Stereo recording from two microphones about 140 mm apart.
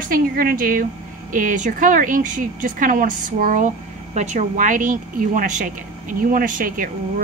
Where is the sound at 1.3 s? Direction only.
65° right (ahead or behind).